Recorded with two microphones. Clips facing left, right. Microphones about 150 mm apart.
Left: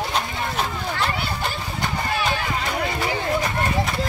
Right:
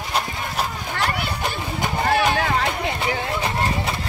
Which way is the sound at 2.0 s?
60° right (ahead or behind).